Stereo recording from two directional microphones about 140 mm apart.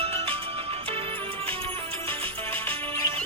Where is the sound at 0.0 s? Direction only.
45° right (ahead or behind).